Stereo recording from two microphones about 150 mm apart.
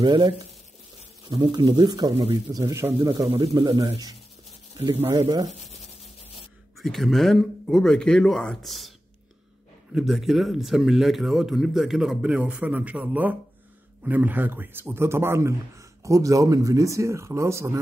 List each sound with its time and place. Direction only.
0.0 s a man's voice: 30° right (ahead or behind)
5.1 s a man's voice: 30° right (ahead or behind)
5.5 s speech: 50° left (ahead or behind)
6.8 s speech: centre (ahead or behind)
9.9 s a man's voice: centre (ahead or behind); by 17.7 s 20° right (ahead or behind)